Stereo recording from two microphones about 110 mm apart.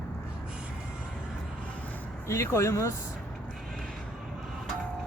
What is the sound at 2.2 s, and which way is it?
Speech, 25° left (ahead or behind).